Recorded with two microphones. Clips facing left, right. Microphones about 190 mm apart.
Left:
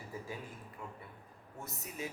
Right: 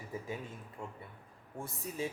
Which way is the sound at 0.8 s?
25° right (ahead or behind).